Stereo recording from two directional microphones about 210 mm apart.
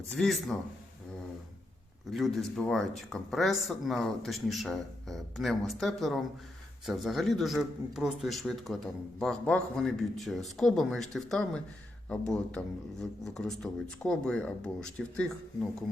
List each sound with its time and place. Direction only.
0.1 s a man's voice: centre (ahead or behind)
2.1 s a man's voice: centre (ahead or behind)